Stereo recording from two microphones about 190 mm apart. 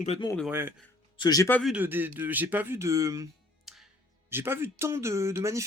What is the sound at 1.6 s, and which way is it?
Speech, 10° right (ahead or behind).